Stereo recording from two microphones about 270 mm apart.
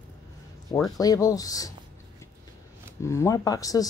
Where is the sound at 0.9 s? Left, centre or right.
Centre.